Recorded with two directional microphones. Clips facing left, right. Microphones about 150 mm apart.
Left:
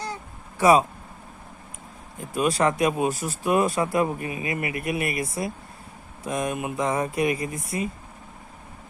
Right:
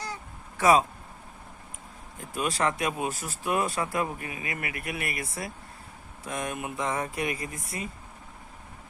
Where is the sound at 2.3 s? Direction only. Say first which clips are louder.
Left 6 dB; 15° left (ahead or behind).